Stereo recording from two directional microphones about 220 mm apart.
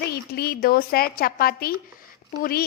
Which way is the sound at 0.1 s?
45° left (ahead or behind).